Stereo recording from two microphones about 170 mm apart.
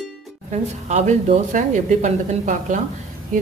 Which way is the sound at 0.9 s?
40° right (ahead or behind).